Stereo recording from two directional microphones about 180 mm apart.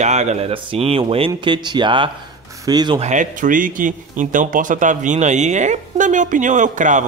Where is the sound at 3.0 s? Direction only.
45° right (ahead or behind).